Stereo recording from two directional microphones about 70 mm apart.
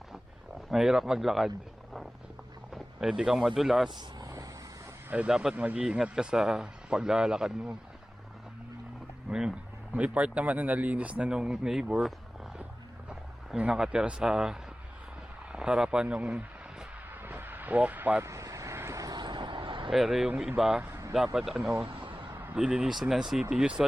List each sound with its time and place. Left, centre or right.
0.7 s speech: centre
3.8 s speech: right
5.1 s speech: centre
5.8 s speech: centre
9.3 s speech: centre
9.9 s speech: centre
15.5 s a sound: centre
18.2 s vehicle: right
19.1 s vehicle: right
19.9 s speech: centre